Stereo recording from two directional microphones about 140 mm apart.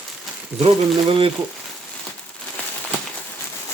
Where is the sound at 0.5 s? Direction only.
45° right (ahead or behind).